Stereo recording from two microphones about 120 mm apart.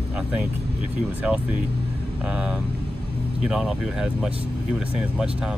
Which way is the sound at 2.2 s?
5° right (ahead or behind).